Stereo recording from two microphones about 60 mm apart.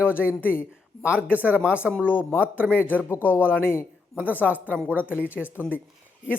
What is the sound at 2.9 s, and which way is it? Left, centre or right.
Speech, left.